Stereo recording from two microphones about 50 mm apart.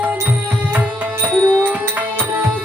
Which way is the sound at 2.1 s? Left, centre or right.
Right.